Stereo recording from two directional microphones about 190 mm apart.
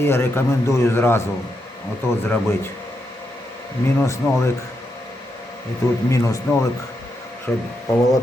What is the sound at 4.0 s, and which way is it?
Speech, 15° left (ahead or behind).